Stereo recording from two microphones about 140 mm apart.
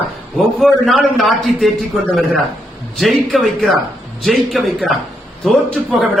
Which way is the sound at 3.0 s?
Centre (ahead or behind).